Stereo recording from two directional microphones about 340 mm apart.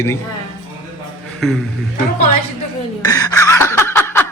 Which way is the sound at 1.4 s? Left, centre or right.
Centre.